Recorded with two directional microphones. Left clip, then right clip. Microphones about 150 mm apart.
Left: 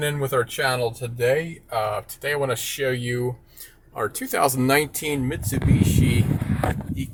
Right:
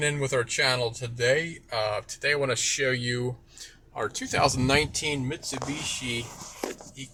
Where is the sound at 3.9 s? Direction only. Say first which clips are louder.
Left 4 dB; 15° left (ahead or behind); by 5.6 s 35° left (ahead or behind).